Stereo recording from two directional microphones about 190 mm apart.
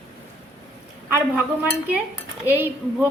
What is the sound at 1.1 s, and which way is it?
A woman's voice, 10° right (ahead or behind).